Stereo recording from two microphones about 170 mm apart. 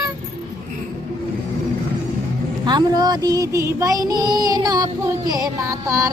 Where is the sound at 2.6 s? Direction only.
25° right (ahead or behind).